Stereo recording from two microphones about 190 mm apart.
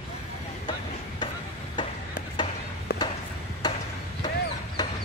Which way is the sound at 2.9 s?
55° left (ahead or behind).